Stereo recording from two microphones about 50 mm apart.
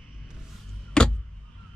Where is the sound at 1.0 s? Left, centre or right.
Centre.